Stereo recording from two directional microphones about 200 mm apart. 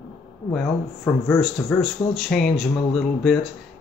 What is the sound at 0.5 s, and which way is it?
Speech, 15° left (ahead or behind).